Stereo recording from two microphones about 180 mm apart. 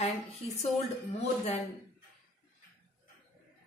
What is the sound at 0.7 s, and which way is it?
Speech, 35° left (ahead or behind).